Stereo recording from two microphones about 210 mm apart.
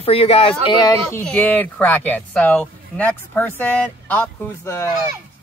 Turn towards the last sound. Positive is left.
turn(degrees=10)  # may be behind; listen again after turning